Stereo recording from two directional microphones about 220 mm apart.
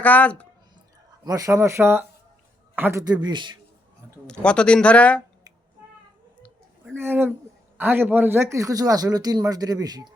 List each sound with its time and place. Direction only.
0.0 s speech: 5° left (ahead or behind)
1.2 s a man's voice: 15° right (ahead or behind)
4.3 s speech: 5° left (ahead or behind)
6.9 s a man's voice: 10° right (ahead or behind)